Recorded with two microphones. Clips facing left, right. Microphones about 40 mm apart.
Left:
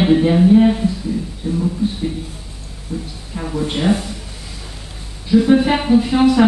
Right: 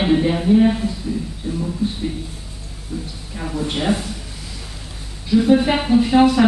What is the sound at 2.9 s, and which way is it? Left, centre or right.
Speech, centre.